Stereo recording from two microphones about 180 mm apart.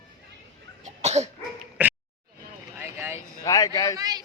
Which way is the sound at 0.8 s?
40° right (ahead or behind).